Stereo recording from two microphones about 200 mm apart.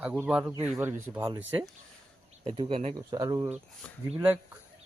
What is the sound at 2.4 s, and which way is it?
Speech, 30° right (ahead or behind).